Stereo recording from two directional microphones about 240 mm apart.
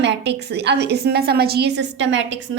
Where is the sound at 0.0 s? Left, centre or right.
Right.